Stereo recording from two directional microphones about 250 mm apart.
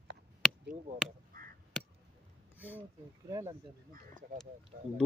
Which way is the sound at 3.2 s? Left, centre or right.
Centre.